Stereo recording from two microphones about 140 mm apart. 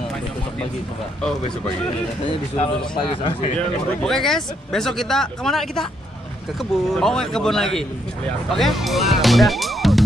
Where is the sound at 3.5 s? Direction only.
5° left (ahead or behind).